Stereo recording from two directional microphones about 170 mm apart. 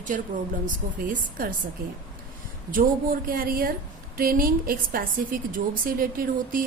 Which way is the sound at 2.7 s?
55° right (ahead or behind).